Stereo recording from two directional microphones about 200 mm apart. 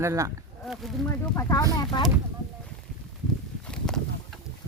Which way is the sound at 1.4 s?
15° left (ahead or behind).